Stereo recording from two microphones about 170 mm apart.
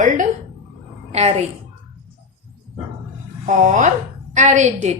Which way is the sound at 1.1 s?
40° right (ahead or behind).